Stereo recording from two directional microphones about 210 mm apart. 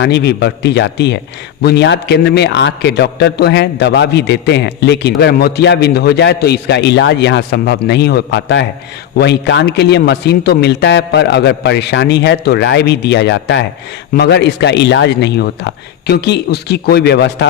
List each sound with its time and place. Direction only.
0.0 s a man's voice: 50° left (ahead or behind)